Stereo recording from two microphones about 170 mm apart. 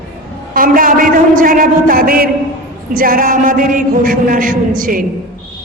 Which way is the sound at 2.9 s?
55° right (ahead or behind).